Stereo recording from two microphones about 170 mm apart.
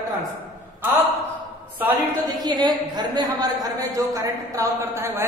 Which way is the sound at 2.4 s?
25° right (ahead or behind).